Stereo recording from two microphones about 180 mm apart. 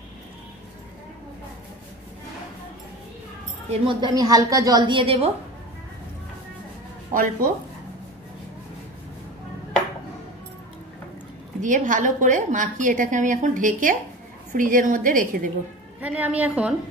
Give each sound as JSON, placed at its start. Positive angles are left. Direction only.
{"t": 3.8, "sound": "a woman's voice", "side_deg": -25}
{"t": 7.2, "sound": "a woman's voice", "side_deg": -55}
{"t": 11.6, "sound": "a woman's voice", "side_deg": -45}
{"t": 16.0, "sound": "a woman's voice", "side_deg": -5}